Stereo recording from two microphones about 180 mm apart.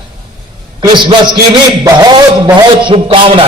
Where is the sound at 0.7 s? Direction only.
25° right (ahead or behind).